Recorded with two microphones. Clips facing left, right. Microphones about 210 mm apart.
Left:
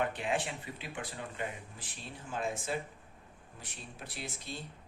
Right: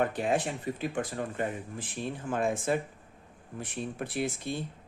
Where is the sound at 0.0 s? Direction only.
40° right (ahead or behind).